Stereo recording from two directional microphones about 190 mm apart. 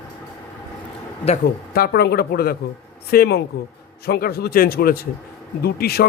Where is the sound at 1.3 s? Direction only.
35° left (ahead or behind).